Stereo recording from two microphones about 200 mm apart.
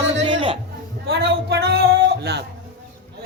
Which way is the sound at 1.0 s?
55° right (ahead or behind).